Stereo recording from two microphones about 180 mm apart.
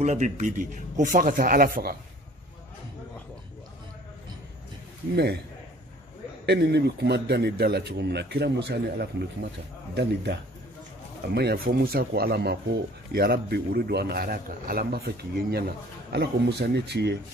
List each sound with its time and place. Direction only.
0.0 s speech: 40° right (ahead or behind)
5.1 s a man's voice: 65° right (ahead or behind)
6.4 s a man's voice: 70° right (ahead or behind)
11.3 s a man's voice: 60° right (ahead or behind)